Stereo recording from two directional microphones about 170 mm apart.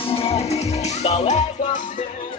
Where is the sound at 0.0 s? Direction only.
35° left (ahead or behind).